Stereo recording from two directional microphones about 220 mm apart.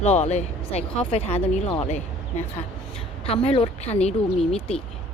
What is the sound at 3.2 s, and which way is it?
Speech, 25° left (ahead or behind).